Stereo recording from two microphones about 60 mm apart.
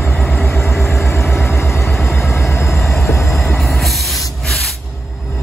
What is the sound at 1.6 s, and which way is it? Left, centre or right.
Vehicle, left.